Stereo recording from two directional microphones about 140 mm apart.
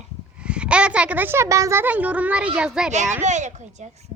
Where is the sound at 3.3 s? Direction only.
60° right (ahead or behind).